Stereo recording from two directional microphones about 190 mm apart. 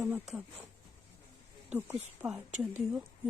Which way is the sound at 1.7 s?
10° right (ahead or behind).